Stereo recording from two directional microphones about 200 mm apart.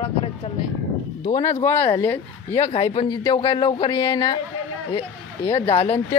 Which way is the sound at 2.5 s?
30° left (ahead or behind).